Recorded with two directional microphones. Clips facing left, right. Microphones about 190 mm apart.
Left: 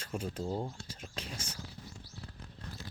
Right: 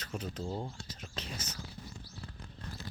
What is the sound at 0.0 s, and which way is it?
Speech, 10° left (ahead or behind).